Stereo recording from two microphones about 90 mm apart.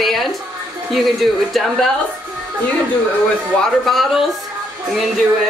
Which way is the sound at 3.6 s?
Centre (ahead or behind).